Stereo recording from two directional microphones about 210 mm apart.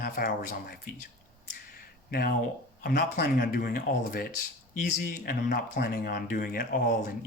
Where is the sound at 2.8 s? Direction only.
40° left (ahead or behind).